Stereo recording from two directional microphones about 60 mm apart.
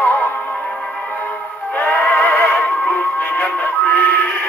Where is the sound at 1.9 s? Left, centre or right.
Left.